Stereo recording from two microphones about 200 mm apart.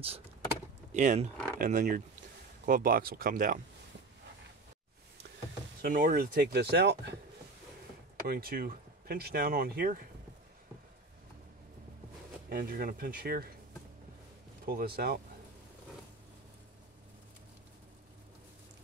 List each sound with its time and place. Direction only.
0.9 s speech: 40° right (ahead or behind)
5.8 s speech: 45° right (ahead or behind)
8.3 s speech: 45° right (ahead or behind)
12.4 s speech: 45° right (ahead or behind)
14.7 s speech: 50° right (ahead or behind)